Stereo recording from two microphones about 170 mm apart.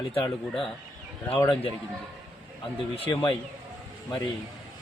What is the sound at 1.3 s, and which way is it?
Speech, 25° left (ahead or behind).